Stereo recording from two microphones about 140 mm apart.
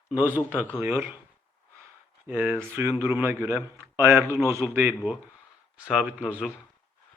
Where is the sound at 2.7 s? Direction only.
Centre (ahead or behind).